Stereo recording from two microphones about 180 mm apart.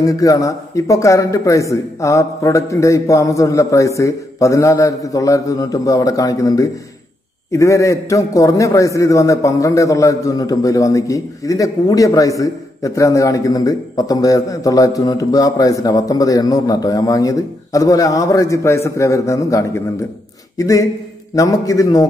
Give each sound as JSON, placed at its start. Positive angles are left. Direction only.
{"t": 0.0, "sound": "a man's voice", "side_deg": 20}